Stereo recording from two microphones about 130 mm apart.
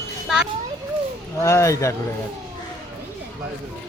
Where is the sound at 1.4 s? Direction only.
25° left (ahead or behind).